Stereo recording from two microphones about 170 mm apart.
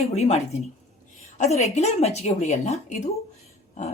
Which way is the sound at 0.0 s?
40° left (ahead or behind).